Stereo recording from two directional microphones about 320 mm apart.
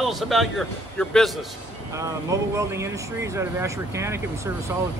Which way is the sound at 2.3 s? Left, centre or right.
Centre.